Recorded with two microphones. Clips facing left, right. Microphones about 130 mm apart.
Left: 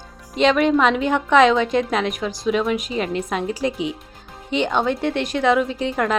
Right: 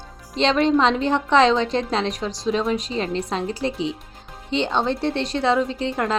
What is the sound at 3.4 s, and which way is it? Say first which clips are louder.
Speech: left 2 dB; 15° left (ahead or behind).